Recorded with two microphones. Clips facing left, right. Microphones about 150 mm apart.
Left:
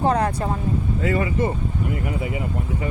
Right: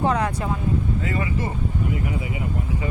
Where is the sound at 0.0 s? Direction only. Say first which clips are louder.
Left 2 dB; 35° left (ahead or behind).